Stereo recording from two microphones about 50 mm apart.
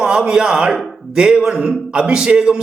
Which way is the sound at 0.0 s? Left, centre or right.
Centre.